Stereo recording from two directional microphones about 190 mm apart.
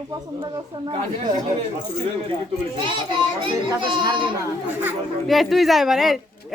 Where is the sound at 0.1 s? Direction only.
20° right (ahead or behind).